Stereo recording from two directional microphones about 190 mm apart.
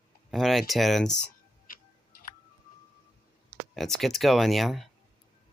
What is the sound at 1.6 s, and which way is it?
Tick-tock, 50° left (ahead or behind).